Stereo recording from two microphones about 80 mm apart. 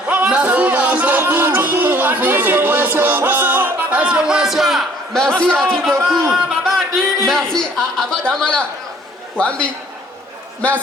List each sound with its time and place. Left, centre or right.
0.1 s music: centre
5.7 s speech: centre
6.3 s a sound: centre
9.4 s speech: centre